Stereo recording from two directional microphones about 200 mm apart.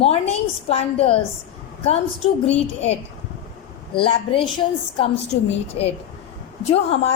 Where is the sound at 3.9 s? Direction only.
25° left (ahead or behind).